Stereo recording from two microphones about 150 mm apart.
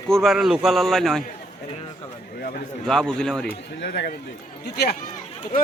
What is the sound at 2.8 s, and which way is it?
Speech, 5° left (ahead or behind).